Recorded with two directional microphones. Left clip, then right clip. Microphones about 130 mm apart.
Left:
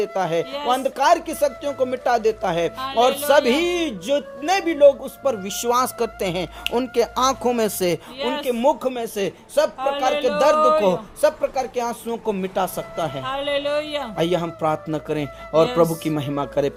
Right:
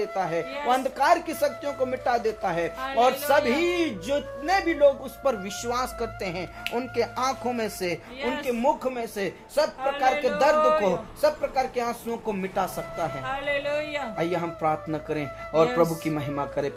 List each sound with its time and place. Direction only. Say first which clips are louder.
0.0 s a man's voice: left 5 dB; 60° left (ahead or behind)
0.7 s a man's voice: left 4 dB; 35° left (ahead or behind); by 3.7 s 55° left (ahead or behind)
3.7 s speech: left 4 dB; 35° left (ahead or behind)
4.4 s speech: left 5 dB; 60° left (ahead or behind)
5.2 s speech: left 3 dB; 25° left (ahead or behind)
5.6 s speech: left 9 dB; 65° left (ahead or behind); by 8.3 s 90° left
8.3 s a man's voice: left 5 dB; 60° left (ahead or behind)
10.1 s speech: left 2 dB; 90° left
10.3 s speech: left 7 dB; 45° left (ahead or behind)
13.2 s a man's voice: left 5 dB; 65° left (ahead or behind)
16.3 s a man's voice: left 8 dB; 55° left (ahead or behind)